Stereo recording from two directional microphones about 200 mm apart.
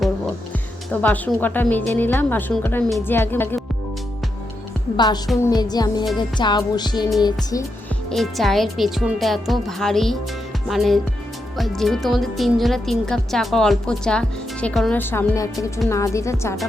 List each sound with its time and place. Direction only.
1.0 s speech: 10° left (ahead or behind)
4.9 s music: 20° left (ahead or behind)
8.1 s a woman's voice: centre (ahead or behind)